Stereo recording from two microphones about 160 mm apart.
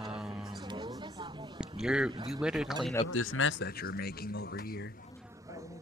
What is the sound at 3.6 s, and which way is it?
Speech, 75° left (ahead or behind).